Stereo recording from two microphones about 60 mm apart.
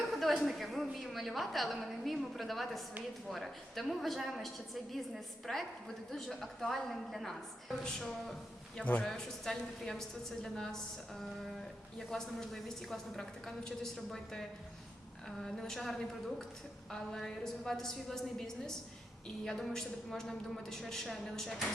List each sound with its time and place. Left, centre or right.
0.0 s a woman's voice: centre
8.8 s a man's voice: left
9.0 s a woman's voice: centre